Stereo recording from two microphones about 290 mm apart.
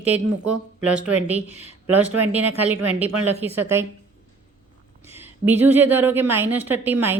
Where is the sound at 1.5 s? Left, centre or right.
Left.